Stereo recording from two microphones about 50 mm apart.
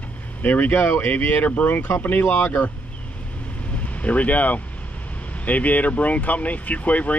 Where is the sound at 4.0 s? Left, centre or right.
Left.